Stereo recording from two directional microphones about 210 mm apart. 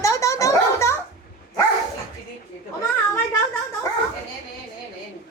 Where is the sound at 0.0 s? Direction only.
15° left (ahead or behind).